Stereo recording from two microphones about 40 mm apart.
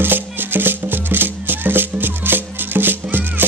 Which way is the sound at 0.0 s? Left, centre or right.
Right.